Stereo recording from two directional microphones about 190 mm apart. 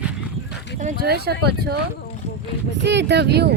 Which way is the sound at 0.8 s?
55° right (ahead or behind).